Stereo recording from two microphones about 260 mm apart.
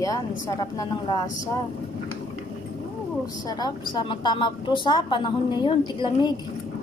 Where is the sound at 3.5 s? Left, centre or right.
Centre.